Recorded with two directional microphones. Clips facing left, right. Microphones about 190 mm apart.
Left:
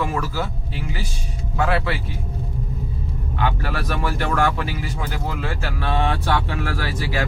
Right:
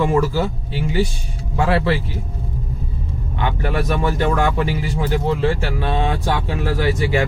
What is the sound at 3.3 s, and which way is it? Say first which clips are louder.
Speech: right 3 dB; 20° right (ahead or behind).